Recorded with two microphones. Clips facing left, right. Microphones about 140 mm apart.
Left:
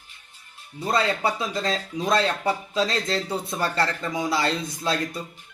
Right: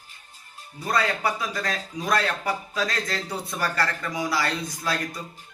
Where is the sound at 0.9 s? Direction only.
25° left (ahead or behind).